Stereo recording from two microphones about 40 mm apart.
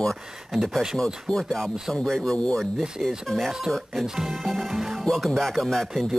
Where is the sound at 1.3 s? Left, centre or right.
Centre.